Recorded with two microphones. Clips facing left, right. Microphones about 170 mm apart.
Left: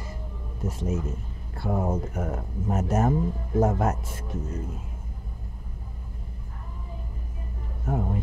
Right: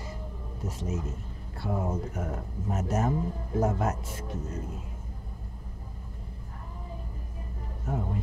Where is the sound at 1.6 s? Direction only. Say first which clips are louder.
Left 4 dB; 50° left (ahead or behind).